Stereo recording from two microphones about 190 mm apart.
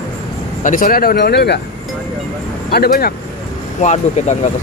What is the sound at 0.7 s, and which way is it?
Speech, 45° left (ahead or behind).